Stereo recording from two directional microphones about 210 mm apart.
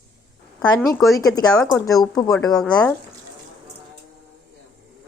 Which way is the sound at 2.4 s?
Centre (ahead or behind).